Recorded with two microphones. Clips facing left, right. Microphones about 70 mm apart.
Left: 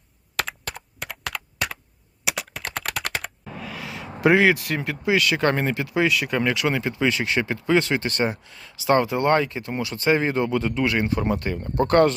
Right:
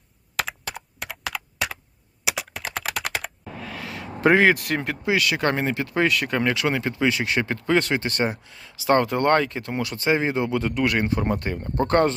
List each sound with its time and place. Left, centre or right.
0.3 s computer keyboard: centre
4.3 s speech: right
5.0 s speech: right
5.7 s speech: right
7.4 s speech: right
9.0 s speech: right
10.0 s speech: right
10.8 s speech: right
11.8 s speech: right